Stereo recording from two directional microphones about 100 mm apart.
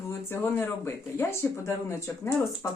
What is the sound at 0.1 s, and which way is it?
Speech, 25° left (ahead or behind).